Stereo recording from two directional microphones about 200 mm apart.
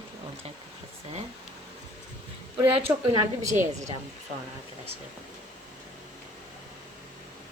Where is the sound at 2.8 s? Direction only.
25° right (ahead or behind).